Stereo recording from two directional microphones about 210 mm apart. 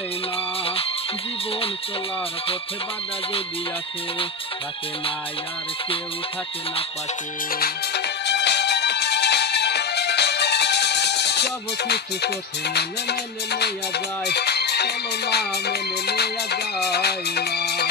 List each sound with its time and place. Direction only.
7.5 s music: 50° left (ahead or behind)